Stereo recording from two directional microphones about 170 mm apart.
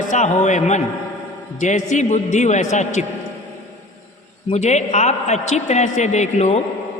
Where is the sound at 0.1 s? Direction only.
45° left (ahead or behind).